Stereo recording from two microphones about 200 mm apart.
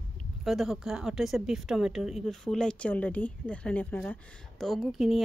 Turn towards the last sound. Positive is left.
turn(degrees=0)  # may be behind; listen again after turning